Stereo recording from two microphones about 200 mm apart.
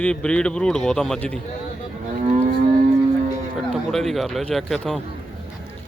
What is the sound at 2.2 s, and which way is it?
Livestock, 35° right (ahead or behind).